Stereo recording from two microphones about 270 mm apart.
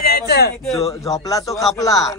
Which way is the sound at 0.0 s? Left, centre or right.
Left.